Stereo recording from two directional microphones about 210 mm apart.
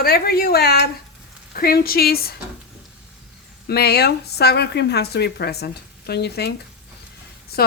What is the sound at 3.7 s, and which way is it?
Speech, 50° left (ahead or behind).